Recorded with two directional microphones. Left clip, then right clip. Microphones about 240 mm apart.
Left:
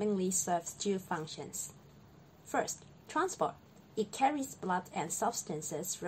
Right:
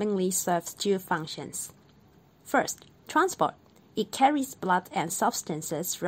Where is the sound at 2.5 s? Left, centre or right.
Right.